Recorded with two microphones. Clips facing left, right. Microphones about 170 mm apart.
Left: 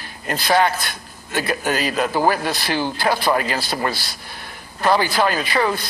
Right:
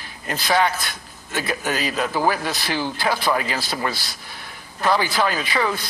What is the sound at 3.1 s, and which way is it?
Speech, 35° left (ahead or behind).